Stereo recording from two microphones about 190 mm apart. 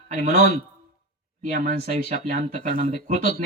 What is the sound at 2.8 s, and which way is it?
Speech, 60° left (ahead or behind).